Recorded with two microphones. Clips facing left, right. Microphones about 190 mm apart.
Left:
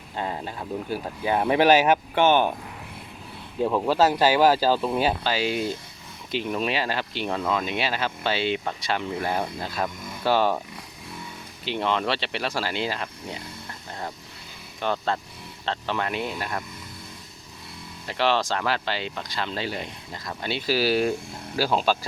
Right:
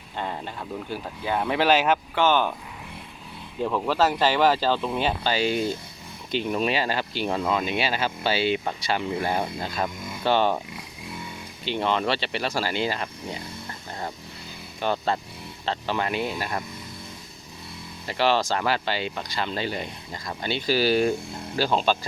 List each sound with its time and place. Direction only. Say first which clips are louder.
0.2 s speech: left 1 dB; 5° left (ahead or behind)
3.6 s speech: left 2 dB; 15° left (ahead or behind)
11.6 s speech: right 1 dB; centre (ahead or behind)
14.9 s speech: right 1 dB; 10° right (ahead or behind)
18.0 s speech: right 1 dB; 5° right (ahead or behind)